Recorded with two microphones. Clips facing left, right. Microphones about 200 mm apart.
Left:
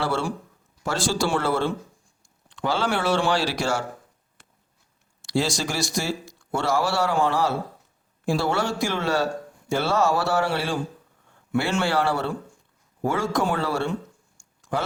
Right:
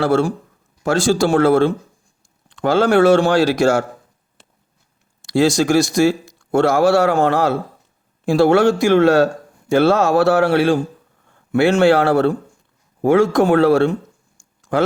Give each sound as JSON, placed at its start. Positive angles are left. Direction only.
{"t": 0.0, "sound": "speech", "side_deg": -45}
{"t": 4.4, "sound": "a sound", "side_deg": -25}
{"t": 5.2, "sound": "speech", "side_deg": -50}
{"t": 7.1, "sound": "a man's voice", "side_deg": -65}
{"t": 8.3, "sound": "a man's voice", "side_deg": -70}
{"t": 9.2, "sound": "a sound", "side_deg": -90}
{"t": 10.1, "sound": "a man's voice", "side_deg": -60}
{"t": 11.8, "sound": "speech", "side_deg": -70}
{"t": 12.0, "sound": "speech", "side_deg": -50}
{"t": 13.0, "sound": "a man's voice", "side_deg": -60}